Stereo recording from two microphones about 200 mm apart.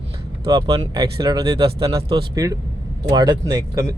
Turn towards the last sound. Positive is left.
turn(degrees=-15)  # may be behind; listen again after turning